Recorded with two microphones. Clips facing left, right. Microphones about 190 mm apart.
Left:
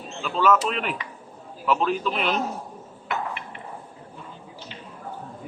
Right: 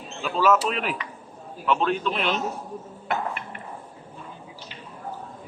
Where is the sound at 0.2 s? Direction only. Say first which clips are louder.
Even; 5° right (ahead or behind).